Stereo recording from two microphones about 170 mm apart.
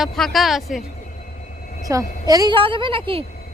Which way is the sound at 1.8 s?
20° right (ahead or behind).